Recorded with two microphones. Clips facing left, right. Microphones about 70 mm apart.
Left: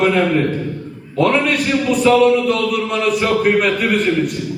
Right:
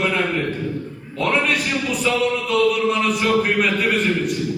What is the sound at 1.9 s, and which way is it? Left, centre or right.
Music, left.